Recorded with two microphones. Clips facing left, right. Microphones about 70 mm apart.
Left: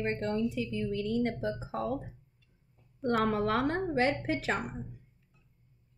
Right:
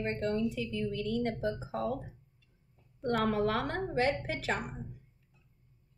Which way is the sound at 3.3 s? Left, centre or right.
Left.